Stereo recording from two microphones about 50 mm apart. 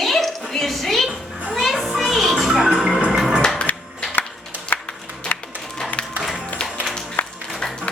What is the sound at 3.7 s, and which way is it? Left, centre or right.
Music, left.